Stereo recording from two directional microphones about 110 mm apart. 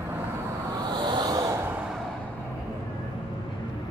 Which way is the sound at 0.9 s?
40° right (ahead or behind).